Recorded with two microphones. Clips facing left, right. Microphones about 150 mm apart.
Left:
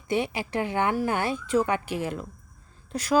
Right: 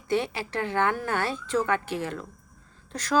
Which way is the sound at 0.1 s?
15° left (ahead or behind).